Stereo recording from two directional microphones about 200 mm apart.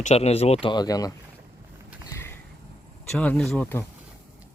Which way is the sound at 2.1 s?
15° left (ahead or behind).